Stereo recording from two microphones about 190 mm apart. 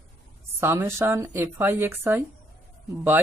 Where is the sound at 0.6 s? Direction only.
10° right (ahead or behind).